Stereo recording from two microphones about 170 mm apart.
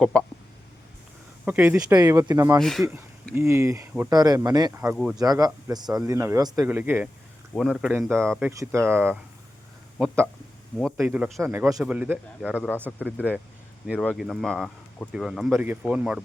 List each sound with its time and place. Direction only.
0.0 s speech: 5° left (ahead or behind)
1.5 s speech: 10° right (ahead or behind)
2.6 s speech: centre (ahead or behind)
3.3 s speech: 15° right (ahead or behind); by 8.4 s 5° left (ahead or behind)
8.4 s speech: 15° right (ahead or behind)
10.9 s speech: 10° right (ahead or behind)
11.4 s speech: 15° right (ahead or behind)
13.9 s speech: 10° left (ahead or behind)